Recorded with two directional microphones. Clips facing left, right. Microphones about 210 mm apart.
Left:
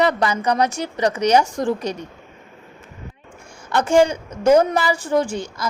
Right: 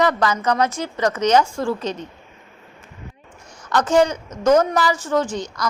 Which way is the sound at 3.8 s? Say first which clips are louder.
Left 2 dB; 10° left (ahead or behind).